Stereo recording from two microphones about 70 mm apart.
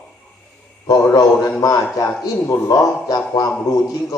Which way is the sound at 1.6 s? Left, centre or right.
Left.